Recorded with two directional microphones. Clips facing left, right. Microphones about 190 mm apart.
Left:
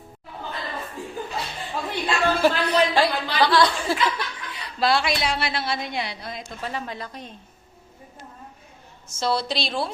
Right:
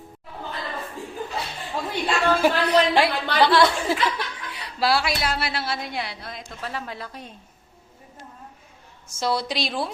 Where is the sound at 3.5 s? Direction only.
25° right (ahead or behind).